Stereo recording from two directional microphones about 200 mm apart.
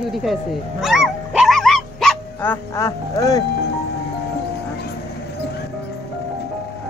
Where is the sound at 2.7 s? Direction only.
15° left (ahead or behind).